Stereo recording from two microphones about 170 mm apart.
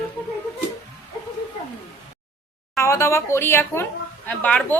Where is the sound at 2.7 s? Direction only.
15° left (ahead or behind).